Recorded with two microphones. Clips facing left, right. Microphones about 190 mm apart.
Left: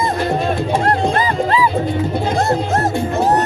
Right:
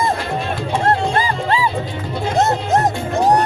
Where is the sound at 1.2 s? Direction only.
30° right (ahead or behind).